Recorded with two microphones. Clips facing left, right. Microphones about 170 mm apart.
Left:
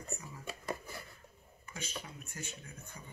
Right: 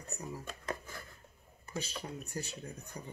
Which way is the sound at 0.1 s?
35° right (ahead or behind).